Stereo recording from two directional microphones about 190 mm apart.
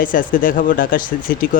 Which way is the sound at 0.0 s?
45° left (ahead or behind).